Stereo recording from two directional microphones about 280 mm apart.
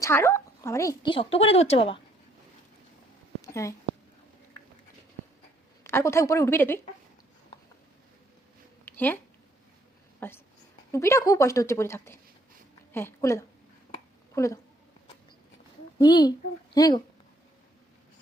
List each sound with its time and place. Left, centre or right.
0.0 s a woman's voice: centre
3.4 s a sound: centre
5.8 s a woman's voice: centre
8.8 s a sound: centre
10.2 s a woman's voice: centre
16.0 s a woman's voice: centre